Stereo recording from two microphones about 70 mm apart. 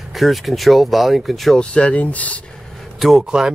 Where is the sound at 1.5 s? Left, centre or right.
Centre.